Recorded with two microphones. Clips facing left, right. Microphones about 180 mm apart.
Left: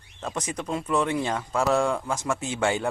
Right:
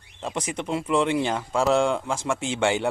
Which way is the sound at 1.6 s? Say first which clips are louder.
Right 2 dB; 25° right (ahead or behind).